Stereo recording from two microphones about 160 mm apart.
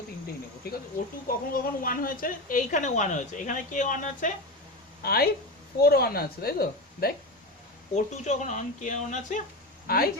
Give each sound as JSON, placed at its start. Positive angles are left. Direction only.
{"t": 1.3, "sound": "a woman's voice", "side_deg": 65}
{"t": 5.0, "sound": "speech", "side_deg": 70}
{"t": 7.9, "sound": "a woman's voice", "side_deg": 45}
{"t": 9.8, "sound": "speech", "side_deg": 65}